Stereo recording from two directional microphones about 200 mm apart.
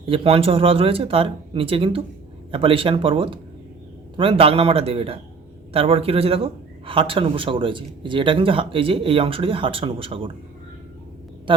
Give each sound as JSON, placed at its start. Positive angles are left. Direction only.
{"t": 0.0, "sound": "a man's voice", "side_deg": -25}
{"t": 11.5, "sound": "a woman's voice", "side_deg": -25}